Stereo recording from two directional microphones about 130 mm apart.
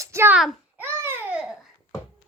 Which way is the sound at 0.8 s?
15° right (ahead or behind).